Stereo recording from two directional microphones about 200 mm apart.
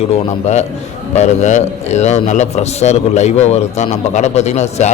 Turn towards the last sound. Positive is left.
turn(degrees=35)  # may be behind; listen again after turning